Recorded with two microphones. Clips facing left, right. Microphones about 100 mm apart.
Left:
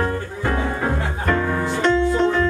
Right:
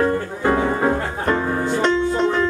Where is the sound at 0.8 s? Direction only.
30° right (ahead or behind).